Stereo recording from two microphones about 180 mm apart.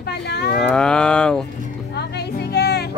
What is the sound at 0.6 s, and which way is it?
Speech, 5° left (ahead or behind).